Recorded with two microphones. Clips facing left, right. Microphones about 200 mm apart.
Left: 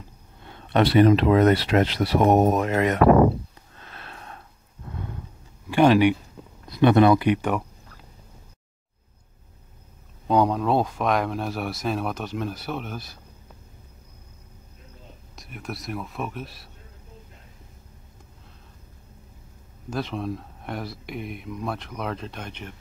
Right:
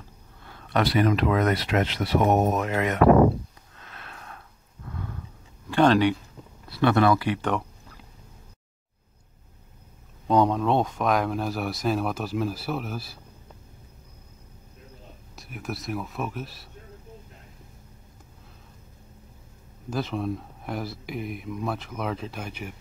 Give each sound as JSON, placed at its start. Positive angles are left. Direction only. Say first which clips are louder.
{"t": 0.4, "sound": "speech", "louder": "left 4 dB", "side_deg": 25}
{"t": 3.8, "sound": "sniff", "louder": "left 2 dB", "side_deg": 30}
{"t": 5.7, "sound": "speech", "louder": "left 2 dB", "side_deg": 10}
{"t": 10.2, "sound": "speech", "louder": "even", "side_deg": 0}
{"t": 15.3, "sound": "speech", "louder": "right 1 dB", "side_deg": -5}
{"t": 19.9, "sound": "speech", "louder": "right 1 dB", "side_deg": 0}